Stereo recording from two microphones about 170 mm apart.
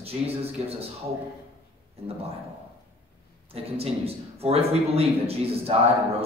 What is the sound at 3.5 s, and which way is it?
A man's voice, 35° right (ahead or behind).